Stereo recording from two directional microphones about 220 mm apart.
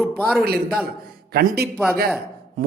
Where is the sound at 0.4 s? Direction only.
45° right (ahead or behind).